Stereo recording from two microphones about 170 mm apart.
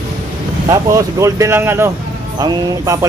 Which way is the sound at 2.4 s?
20° right (ahead or behind).